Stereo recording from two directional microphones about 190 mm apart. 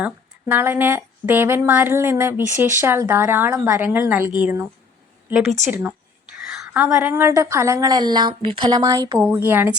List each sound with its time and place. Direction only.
0.0 s speech: 10° right (ahead or behind)
6.5 s speech: 5° right (ahead or behind)